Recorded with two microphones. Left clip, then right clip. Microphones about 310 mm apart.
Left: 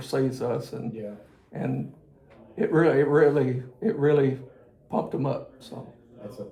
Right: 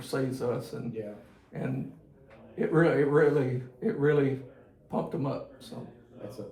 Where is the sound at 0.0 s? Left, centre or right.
Left.